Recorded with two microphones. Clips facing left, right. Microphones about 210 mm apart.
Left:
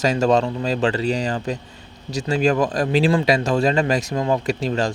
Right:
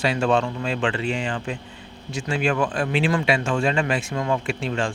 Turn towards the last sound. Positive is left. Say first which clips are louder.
# left 4 dB
turn(degrees=40)  # may be behind; listen again after turning